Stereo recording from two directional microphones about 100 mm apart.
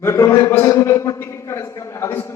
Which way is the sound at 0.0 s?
25° left (ahead or behind).